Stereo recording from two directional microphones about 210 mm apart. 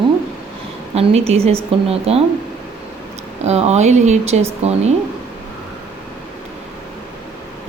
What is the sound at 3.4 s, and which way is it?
Speech, 30° right (ahead or behind).